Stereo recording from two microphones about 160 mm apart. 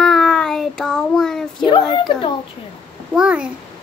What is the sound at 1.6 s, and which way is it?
Speech, 30° left (ahead or behind).